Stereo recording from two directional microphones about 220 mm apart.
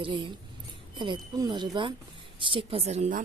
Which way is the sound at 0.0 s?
20° right (ahead or behind).